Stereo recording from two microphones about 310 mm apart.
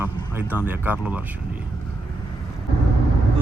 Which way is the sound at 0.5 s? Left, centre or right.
Centre.